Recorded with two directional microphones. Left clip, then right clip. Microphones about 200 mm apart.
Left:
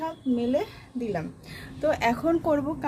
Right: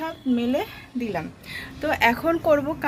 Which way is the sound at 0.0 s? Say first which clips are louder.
Right 2 dB; 5° right (ahead or behind).